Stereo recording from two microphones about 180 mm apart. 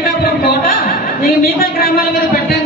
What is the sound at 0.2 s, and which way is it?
A woman's voice, 55° left (ahead or behind).